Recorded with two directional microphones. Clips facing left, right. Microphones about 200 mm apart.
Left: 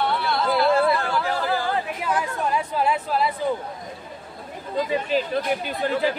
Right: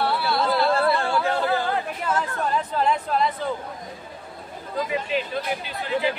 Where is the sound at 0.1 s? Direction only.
Centre (ahead or behind).